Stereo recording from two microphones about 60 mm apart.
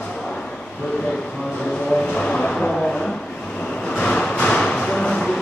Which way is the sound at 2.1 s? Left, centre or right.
Centre.